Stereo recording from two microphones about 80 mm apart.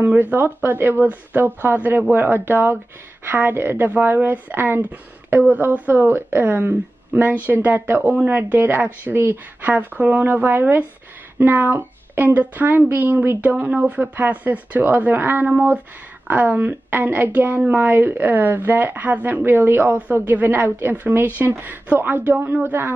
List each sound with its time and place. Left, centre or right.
0.0 s a woman's voice: right